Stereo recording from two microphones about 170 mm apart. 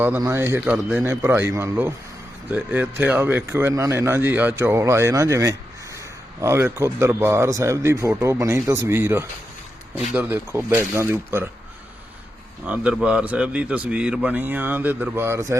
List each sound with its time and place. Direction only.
0.2 s a man's voice: 15° right (ahead or behind)
12.6 s a man's voice: 10° right (ahead or behind)